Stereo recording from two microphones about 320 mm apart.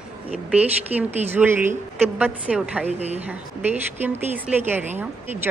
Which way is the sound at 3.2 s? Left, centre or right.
Centre.